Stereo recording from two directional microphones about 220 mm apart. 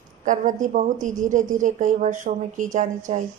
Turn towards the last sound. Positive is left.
turn(degrees=-35)  # may be behind; listen again after turning